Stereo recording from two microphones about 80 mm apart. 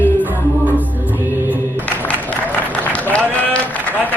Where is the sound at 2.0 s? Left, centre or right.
Left.